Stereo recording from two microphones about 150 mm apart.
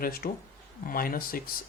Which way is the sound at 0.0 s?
90° left.